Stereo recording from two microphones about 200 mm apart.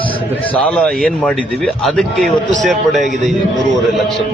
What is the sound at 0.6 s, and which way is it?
A man's voice, 5° left (ahead or behind).